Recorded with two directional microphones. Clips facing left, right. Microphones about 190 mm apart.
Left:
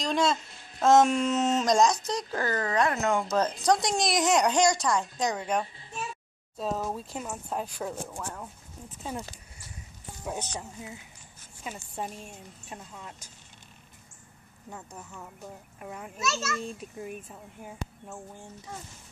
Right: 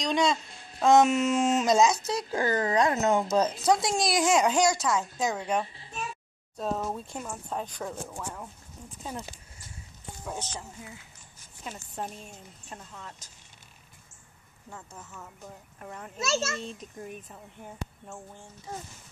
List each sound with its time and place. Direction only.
0.0 s speech: centre (ahead or behind)
2.4 s speech: 20° right (ahead or behind); by 8.9 s centre (ahead or behind)
10.2 s speech: 20° left (ahead or behind)
11.6 s speech: 5° left (ahead or behind)
15.8 s speech: 10° left (ahead or behind)
16.2 s a child's voice: 30° right (ahead or behind)
16.6 s speech: 10° left (ahead or behind)